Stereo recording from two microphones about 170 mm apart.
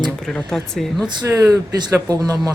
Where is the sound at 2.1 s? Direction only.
25° right (ahead or behind).